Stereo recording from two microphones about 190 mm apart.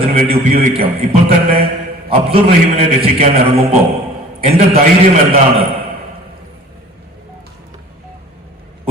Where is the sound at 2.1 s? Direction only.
30° right (ahead or behind).